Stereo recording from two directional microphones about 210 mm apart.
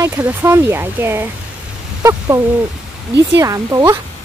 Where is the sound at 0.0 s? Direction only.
10° right (ahead or behind).